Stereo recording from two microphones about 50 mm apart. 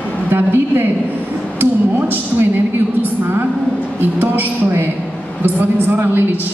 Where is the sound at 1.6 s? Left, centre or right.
Right.